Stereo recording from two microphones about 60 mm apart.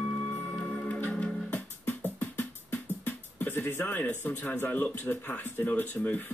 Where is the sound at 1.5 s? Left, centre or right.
Left.